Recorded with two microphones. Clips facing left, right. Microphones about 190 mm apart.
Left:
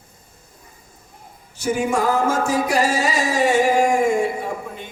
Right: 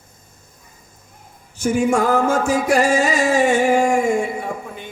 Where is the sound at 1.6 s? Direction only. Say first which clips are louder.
Right 3 dB; 50° right (ahead or behind).